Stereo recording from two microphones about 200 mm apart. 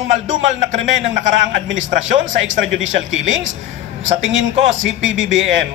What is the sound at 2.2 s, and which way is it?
A man's voice, 70° right (ahead or behind).